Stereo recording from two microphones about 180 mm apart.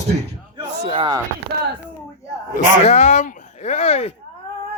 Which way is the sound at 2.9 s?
40° left (ahead or behind).